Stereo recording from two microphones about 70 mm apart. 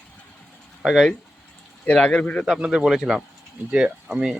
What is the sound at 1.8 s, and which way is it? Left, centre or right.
Speech, centre.